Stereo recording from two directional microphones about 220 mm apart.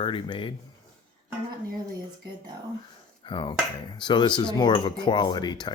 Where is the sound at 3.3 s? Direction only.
20° left (ahead or behind).